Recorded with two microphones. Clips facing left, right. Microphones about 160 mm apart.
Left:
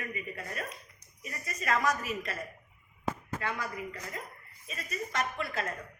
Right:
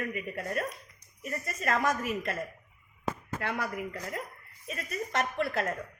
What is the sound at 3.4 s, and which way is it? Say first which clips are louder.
A woman's voice: right 6 dB; 65° right (ahead or behind).